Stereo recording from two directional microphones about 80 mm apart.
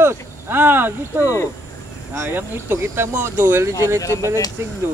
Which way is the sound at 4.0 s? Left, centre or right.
Left.